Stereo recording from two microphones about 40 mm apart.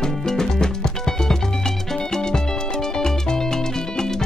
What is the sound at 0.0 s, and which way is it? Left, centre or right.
Music, centre.